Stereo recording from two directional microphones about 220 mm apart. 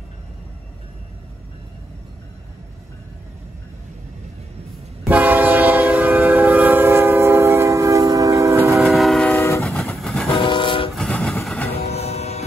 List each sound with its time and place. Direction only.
5.0 s train: 5° right (ahead or behind)
8.8 s train: centre (ahead or behind)
10.3 s train: 20° left (ahead or behind)
11.0 s train: 5° left (ahead or behind)
11.8 s music: 30° left (ahead or behind)